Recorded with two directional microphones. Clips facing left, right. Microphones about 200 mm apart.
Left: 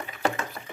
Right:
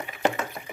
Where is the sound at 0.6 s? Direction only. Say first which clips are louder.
Right 2 dB; 20° right (ahead or behind).